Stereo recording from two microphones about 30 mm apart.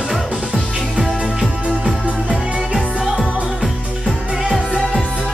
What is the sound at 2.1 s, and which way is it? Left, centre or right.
Music, right.